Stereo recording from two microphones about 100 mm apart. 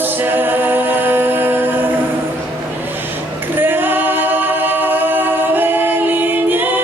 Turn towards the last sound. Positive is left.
turn(degrees=-20)  # may be behind; listen again after turning